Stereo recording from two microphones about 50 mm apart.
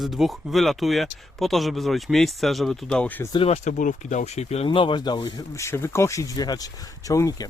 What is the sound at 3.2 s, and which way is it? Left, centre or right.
Speech, left.